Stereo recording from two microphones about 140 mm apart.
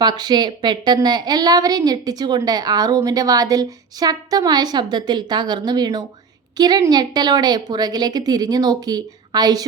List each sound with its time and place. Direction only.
0.0 s a woman's voice: 30° right (ahead or behind)